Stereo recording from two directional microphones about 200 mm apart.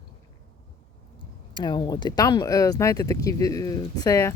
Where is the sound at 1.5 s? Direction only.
20° left (ahead or behind).